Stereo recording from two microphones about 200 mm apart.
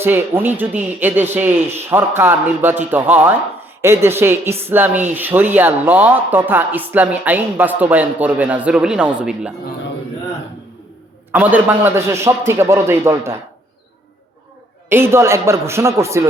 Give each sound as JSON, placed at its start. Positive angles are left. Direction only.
{"t": 0.0, "sound": "speech", "side_deg": -10}
{"t": 11.3, "sound": "speech", "side_deg": -10}
{"t": 14.8, "sound": "speech", "side_deg": -10}